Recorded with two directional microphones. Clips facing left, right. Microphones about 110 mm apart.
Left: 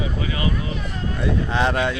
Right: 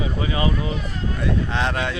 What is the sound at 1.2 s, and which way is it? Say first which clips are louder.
Speech: left 2 dB; 5° left (ahead or behind).